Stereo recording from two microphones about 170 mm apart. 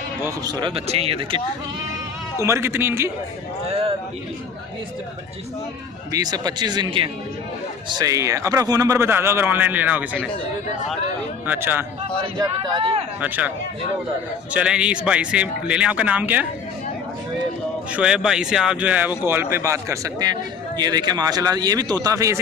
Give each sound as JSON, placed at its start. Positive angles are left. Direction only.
{"t": 0.2, "sound": "speech", "side_deg": -20}
{"t": 2.4, "sound": "speech", "side_deg": -15}
{"t": 6.1, "sound": "speech", "side_deg": -20}
{"t": 11.4, "sound": "speech", "side_deg": -10}
{"t": 12.4, "sound": "speech", "side_deg": -30}
{"t": 14.5, "sound": "speech", "side_deg": -5}
{"t": 17.9, "sound": "speech", "side_deg": -5}